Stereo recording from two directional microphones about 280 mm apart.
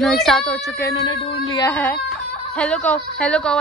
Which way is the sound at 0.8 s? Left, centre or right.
Centre.